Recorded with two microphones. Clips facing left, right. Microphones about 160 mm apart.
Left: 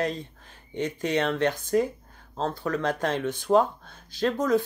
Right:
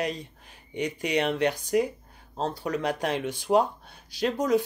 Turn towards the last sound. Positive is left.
turn(degrees=-10)  # may be behind; listen again after turning